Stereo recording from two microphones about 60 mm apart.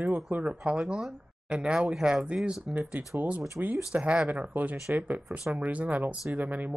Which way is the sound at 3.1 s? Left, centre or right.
Right.